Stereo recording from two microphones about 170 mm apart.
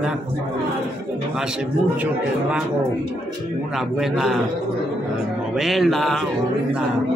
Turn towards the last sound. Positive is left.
turn(degrees=0)  # may be behind; listen again after turning